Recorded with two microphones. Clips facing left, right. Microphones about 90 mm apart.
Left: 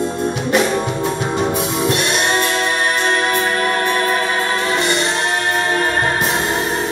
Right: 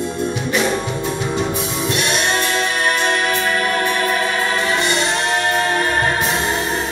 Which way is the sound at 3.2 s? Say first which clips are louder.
Left 1 dB; 35° left (ahead or behind).